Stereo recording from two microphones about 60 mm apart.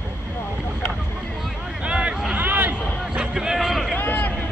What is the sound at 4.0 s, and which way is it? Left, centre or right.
Vehicle, left.